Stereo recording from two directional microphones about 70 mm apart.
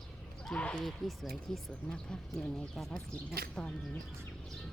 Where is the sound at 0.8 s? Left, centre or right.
Centre.